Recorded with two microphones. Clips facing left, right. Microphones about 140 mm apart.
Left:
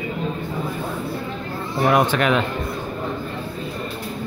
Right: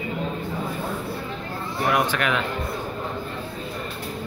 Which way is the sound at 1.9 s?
30° left (ahead or behind).